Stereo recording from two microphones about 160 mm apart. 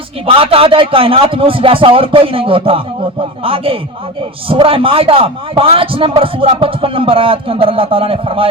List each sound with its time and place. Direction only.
0.3 s a man's voice: 35° right (ahead or behind)